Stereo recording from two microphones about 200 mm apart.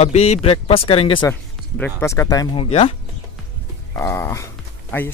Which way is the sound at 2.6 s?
30° left (ahead or behind).